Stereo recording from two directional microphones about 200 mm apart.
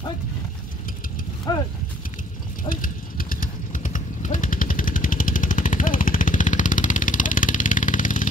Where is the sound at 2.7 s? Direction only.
45° left (ahead or behind).